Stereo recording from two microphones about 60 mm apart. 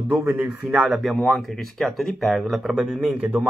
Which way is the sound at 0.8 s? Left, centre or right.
Centre.